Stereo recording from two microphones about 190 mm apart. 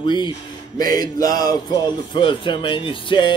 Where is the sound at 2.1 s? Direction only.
25° left (ahead or behind).